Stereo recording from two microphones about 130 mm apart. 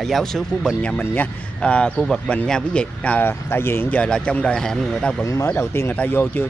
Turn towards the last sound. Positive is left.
turn(degrees=15)  # may be behind; listen again after turning